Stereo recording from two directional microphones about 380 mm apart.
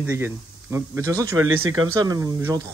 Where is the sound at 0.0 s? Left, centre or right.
Centre.